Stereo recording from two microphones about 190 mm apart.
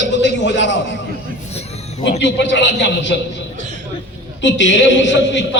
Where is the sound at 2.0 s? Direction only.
65° left (ahead or behind).